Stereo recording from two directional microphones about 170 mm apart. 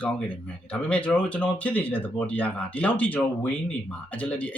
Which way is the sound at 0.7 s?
5° left (ahead or behind).